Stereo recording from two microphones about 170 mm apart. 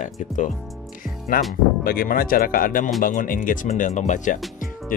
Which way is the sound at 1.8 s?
60° left (ahead or behind).